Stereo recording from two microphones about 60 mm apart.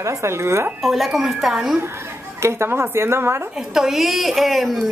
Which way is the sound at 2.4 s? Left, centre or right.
Right.